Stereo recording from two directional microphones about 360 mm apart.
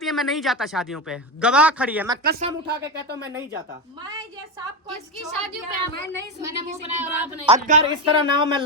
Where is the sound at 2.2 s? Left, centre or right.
Right.